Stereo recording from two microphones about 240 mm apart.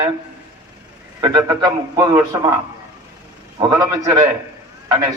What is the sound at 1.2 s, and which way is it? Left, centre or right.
A man's voice, centre.